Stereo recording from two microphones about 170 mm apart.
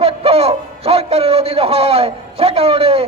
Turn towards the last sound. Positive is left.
turn(degrees=-35)  # may be behind; listen again after turning